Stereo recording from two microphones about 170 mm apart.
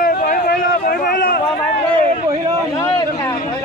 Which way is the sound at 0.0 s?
55° left (ahead or behind).